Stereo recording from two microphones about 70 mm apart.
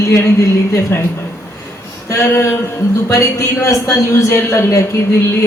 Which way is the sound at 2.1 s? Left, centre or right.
Left.